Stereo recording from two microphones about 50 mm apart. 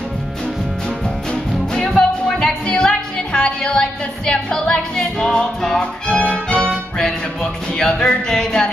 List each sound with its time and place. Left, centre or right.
1.3 s music: centre
6.0 s music: left